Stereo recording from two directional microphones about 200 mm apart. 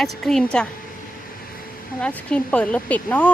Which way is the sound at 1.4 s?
45° left (ahead or behind).